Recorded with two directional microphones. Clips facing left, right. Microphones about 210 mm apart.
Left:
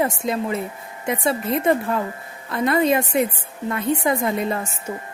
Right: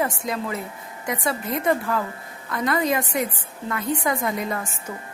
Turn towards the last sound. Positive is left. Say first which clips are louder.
# left 3 dB
turn(degrees=25)  # may be behind; listen again after turning